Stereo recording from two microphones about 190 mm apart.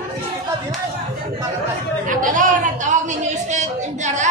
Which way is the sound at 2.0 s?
45° right (ahead or behind).